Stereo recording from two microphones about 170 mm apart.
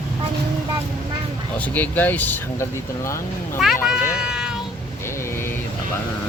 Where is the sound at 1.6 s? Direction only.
10° left (ahead or behind).